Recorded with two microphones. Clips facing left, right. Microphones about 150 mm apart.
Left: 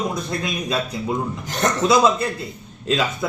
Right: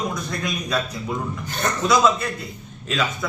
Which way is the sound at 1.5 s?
90° left.